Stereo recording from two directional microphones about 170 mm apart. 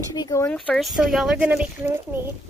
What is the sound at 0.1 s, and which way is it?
Speech, 20° left (ahead or behind).